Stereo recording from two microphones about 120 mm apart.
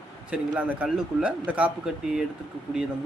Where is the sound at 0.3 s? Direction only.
10° right (ahead or behind).